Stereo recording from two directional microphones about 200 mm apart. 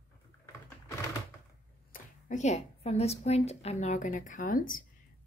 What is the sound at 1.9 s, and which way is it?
A woman's voice, 35° left (ahead or behind).